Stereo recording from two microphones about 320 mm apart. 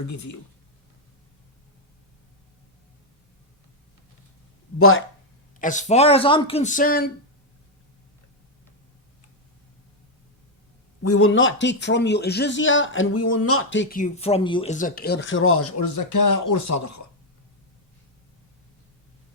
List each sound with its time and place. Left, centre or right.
0.1 s speech: left
4.8 s speech: left
5.5 s speech: left
11.0 s speech: left
13.2 s speech: left
14.0 s speech: centre; by 17.0 s left